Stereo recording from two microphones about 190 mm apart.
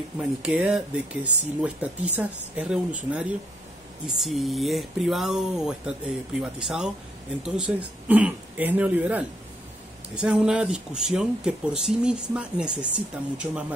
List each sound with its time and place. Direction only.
0.2 s speech: 5° right (ahead or behind)